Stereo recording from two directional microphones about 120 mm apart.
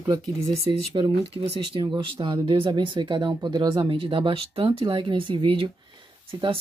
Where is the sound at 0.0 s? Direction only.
25° right (ahead or behind).